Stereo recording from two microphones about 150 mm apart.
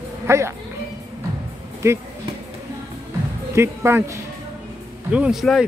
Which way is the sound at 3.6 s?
20° right (ahead or behind).